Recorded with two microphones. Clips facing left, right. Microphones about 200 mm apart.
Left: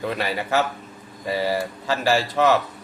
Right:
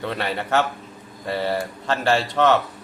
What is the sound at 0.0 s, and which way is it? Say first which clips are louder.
Speech: left 1 dB; 5° left (ahead or behind).